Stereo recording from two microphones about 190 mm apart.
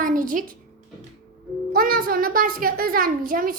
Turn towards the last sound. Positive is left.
turn(degrees=-45)  # may be behind; listen again after turning